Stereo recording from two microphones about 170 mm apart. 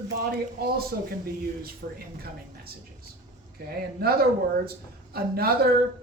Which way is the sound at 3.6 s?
65° right (ahead or behind).